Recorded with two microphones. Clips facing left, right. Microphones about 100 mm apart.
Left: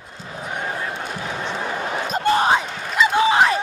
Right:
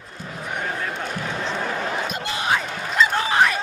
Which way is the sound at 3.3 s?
20° left (ahead or behind).